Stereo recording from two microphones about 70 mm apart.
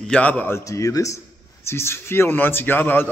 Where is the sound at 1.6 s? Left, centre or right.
Left.